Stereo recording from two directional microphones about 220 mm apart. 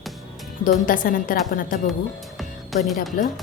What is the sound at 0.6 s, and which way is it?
A woman's voice, 40° left (ahead or behind).